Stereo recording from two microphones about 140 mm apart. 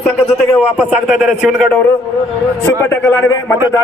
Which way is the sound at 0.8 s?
5° right (ahead or behind).